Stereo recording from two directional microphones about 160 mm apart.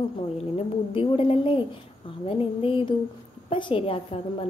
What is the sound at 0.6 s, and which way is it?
A woman's voice, 35° left (ahead or behind).